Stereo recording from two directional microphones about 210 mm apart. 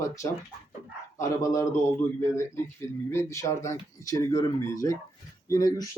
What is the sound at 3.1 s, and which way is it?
Speech, 15° left (ahead or behind).